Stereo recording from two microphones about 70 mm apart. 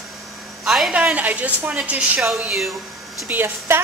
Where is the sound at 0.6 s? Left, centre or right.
Centre.